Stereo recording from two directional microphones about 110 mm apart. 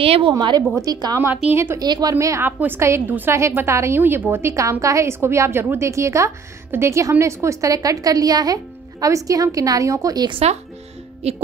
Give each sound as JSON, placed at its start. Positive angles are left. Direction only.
{"t": 0.0, "sound": "a woman's voice", "side_deg": -60}
{"t": 0.3, "sound": "a woman's voice", "side_deg": -40}
{"t": 1.5, "sound": "a woman's voice", "side_deg": -20}
{"t": 1.8, "sound": "a woman's voice", "side_deg": -35}
{"t": 11.2, "sound": "music", "side_deg": -70}